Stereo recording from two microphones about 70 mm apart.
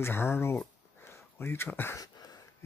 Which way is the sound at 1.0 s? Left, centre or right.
Left.